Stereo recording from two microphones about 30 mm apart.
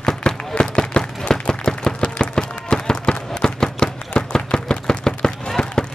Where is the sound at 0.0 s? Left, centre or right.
Left.